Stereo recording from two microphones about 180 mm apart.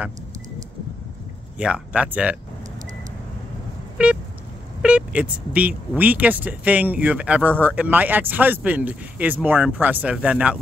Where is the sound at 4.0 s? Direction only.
5° right (ahead or behind).